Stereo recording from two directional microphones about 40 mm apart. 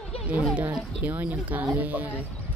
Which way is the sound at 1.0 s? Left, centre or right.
Right.